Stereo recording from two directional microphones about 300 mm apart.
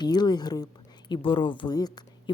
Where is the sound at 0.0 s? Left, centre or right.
Centre.